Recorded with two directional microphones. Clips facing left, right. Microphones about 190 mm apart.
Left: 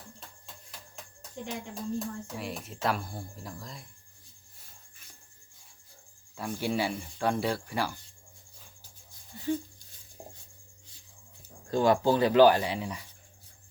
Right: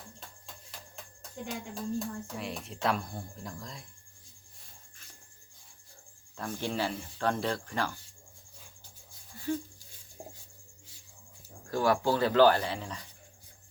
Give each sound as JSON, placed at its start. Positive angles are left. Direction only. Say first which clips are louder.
{"t": 1.7, "sound": "speech", "louder": "even", "side_deg": 0}
{"t": 6.3, "sound": "speech", "louder": "left 3 dB", "side_deg": 10}
{"t": 9.3, "sound": "a sound", "louder": "left 2 dB", "side_deg": 20}
{"t": 11.7, "sound": "speech", "louder": "left 3 dB", "side_deg": 20}